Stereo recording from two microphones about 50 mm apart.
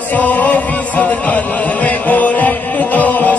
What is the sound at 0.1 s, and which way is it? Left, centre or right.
Music, left.